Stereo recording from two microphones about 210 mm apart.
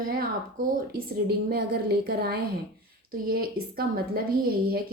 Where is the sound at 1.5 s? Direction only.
45° right (ahead or behind).